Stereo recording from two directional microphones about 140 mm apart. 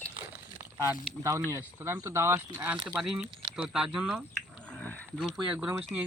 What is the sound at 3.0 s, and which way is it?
Speech, 5° right (ahead or behind).